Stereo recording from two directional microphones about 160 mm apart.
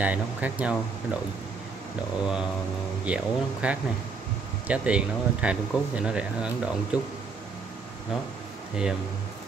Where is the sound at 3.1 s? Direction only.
10° right (ahead or behind).